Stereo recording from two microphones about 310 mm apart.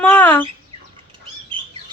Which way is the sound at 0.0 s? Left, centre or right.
Centre.